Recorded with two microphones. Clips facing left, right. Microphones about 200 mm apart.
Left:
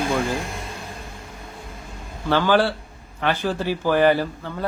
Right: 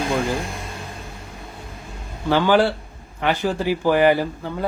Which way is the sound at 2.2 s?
15° right (ahead or behind).